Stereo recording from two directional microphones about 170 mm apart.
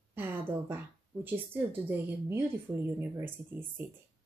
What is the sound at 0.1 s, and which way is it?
A woman's voice, 10° right (ahead or behind).